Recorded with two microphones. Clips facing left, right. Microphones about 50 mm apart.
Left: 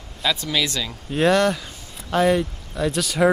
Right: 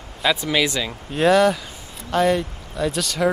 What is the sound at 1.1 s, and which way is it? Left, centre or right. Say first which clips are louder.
Speech: right 2 dB; centre.